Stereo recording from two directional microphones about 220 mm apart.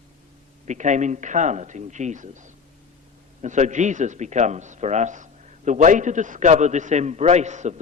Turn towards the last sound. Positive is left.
turn(degrees=-30)  # may be behind; listen again after turning